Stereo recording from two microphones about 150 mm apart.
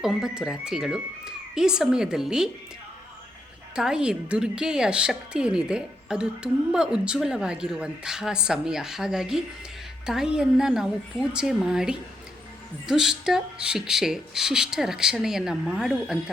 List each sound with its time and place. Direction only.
0.0 s a woman's voice: 5° right (ahead or behind)
3.8 s a woman's voice: 5° right (ahead or behind)